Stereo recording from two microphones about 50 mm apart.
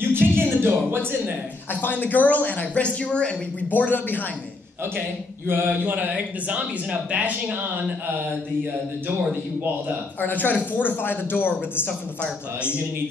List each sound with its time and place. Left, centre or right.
0.1 s music: right
1.7 s speech: left
3.7 s speech: left
5.7 s speech: right
10.2 s speech: left